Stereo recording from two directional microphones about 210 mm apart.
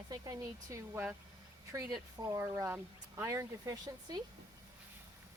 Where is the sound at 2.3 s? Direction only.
15° right (ahead or behind).